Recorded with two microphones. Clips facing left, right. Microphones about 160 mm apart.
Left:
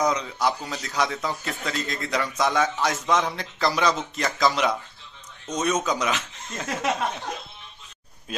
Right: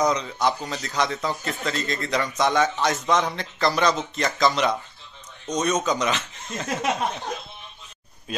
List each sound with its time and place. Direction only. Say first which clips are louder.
0.0 s a man's voice: right 1 dB; 5° left (ahead or behind)